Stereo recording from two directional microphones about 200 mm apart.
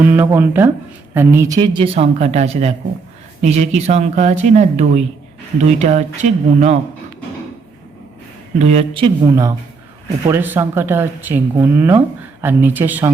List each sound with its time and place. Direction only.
0.0 s a woman's voice: 10° right (ahead or behind); by 6.7 s 35° right (ahead or behind)
8.5 s a woman's voice: 35° right (ahead or behind); by 13.1 s 10° right (ahead or behind)